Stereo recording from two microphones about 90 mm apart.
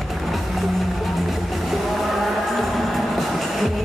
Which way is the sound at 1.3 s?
Centre (ahead or behind).